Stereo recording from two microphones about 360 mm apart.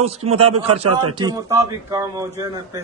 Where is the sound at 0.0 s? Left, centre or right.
Centre.